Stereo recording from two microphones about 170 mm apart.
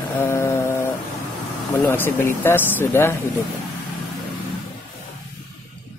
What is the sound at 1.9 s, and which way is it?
Speech, 10° left (ahead or behind).